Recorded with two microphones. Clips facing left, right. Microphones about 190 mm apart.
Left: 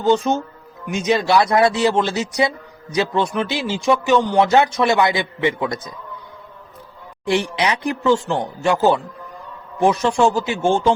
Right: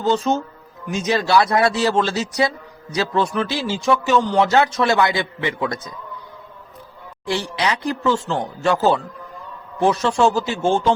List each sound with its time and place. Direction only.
0.0 s speech: 15° left (ahead or behind)
7.3 s speech: 20° left (ahead or behind)